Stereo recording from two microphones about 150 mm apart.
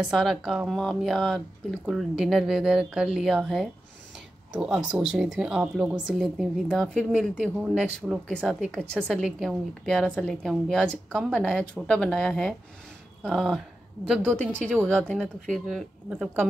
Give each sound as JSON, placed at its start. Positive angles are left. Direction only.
{"t": 0.1, "sound": "a woman's voice", "side_deg": 0}
{"t": 15.5, "sound": "a woman's voice", "side_deg": -5}